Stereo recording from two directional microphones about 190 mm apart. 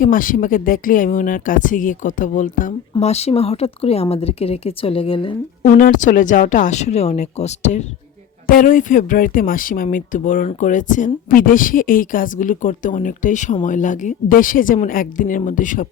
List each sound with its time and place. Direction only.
0.0 s speech: 45° left (ahead or behind); by 5.4 s 30° left (ahead or behind)
5.6 s speech: 45° left (ahead or behind)